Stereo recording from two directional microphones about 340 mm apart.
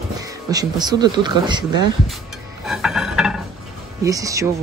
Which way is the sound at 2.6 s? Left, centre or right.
Centre.